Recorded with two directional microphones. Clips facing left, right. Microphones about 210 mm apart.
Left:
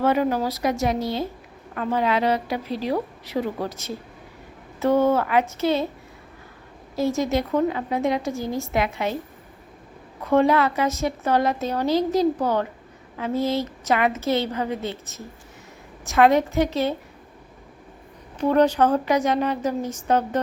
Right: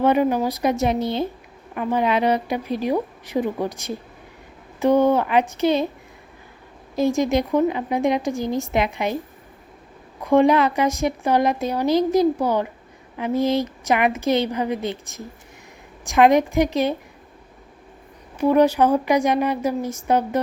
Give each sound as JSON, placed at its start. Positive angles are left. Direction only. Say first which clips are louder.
{"t": 0.0, "sound": "a woman's voice", "louder": "right 3 dB", "side_deg": -15}
{"t": 6.9, "sound": "a woman's voice", "louder": "right 3 dB", "side_deg": -15}
{"t": 10.2, "sound": "a woman's voice", "louder": "right 3 dB", "side_deg": -15}
{"t": 18.3, "sound": "a woman's voice", "louder": "right 2 dB", "side_deg": -10}